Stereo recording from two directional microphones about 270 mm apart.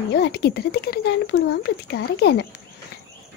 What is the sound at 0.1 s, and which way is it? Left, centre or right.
Speech, left.